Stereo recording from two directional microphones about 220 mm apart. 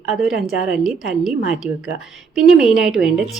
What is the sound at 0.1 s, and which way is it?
A woman's voice, centre (ahead or behind).